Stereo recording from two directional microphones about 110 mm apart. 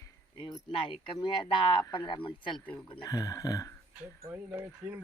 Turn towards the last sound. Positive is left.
turn(degrees=-25)  # may be behind; listen again after turning